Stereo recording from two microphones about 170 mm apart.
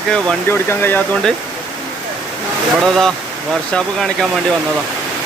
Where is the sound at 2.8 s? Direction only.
Centre (ahead or behind).